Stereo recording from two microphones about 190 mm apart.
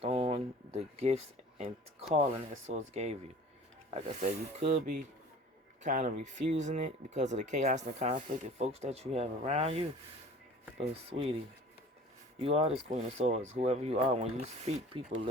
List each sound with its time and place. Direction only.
0.0 s speech: 30° right (ahead or behind)
12.4 s speech: 30° right (ahead or behind)